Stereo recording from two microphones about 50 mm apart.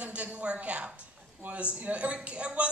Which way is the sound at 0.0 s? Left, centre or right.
Right.